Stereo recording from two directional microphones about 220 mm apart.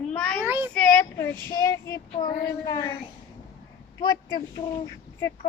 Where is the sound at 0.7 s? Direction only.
5° left (ahead or behind).